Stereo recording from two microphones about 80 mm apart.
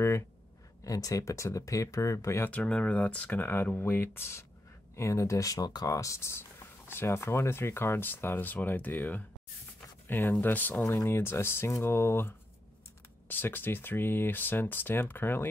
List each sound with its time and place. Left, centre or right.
0.8 s speech: left
2.4 s speech: centre